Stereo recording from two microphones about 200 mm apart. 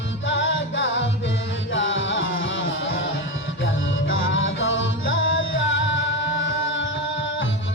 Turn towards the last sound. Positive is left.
turn(degrees=70)  # may be behind; listen again after turning